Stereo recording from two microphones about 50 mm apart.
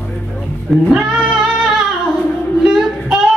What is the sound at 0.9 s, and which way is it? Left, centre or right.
Singing, centre.